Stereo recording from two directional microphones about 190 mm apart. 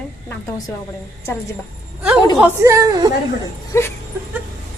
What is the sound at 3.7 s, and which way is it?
Speech, 15° left (ahead or behind).